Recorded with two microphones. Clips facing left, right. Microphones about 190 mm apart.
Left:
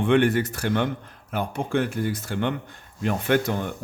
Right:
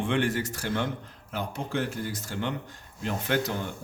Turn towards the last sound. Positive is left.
turn(degrees=60)  # may be behind; listen again after turning